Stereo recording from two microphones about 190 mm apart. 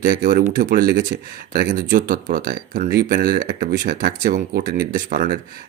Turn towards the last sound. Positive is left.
turn(degrees=-45)  # may be behind; listen again after turning